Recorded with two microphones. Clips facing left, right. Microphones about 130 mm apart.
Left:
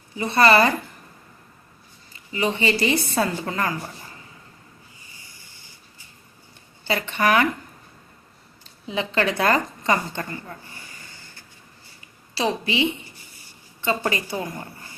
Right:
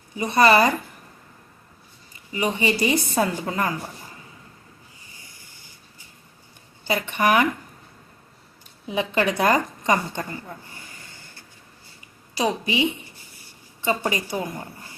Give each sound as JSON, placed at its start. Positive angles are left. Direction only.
{"t": 0.2, "sound": "a woman's voice", "side_deg": -15}
{"t": 2.3, "sound": "a woman's voice", "side_deg": -15}
{"t": 6.8, "sound": "a woman's voice", "side_deg": -15}
{"t": 8.9, "sound": "a woman's voice", "side_deg": -15}
{"t": 12.3, "sound": "a woman's voice", "side_deg": -15}
{"t": 13.8, "sound": "a woman's voice", "side_deg": -15}